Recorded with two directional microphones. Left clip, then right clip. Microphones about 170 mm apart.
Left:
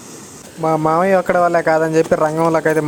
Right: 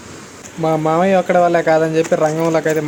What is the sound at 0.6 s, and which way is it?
Speech, 30° left (ahead or behind).